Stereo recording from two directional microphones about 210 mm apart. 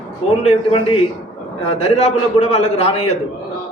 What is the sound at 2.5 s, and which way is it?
Speech, 30° left (ahead or behind).